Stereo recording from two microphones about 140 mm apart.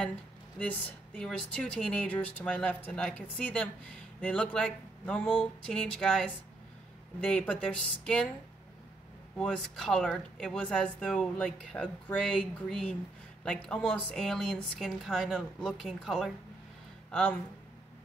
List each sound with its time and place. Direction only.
0.6 s a woman's voice: 10° left (ahead or behind)
9.4 s a woman's voice: 5° left (ahead or behind)